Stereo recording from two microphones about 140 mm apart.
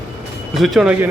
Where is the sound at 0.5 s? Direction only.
Centre (ahead or behind).